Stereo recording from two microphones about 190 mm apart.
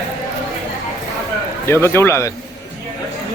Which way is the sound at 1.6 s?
15° left (ahead or behind).